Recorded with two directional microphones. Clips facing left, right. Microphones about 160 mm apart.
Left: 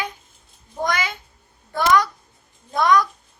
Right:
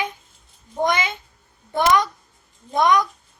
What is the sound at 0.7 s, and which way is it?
Meow, 20° right (ahead or behind).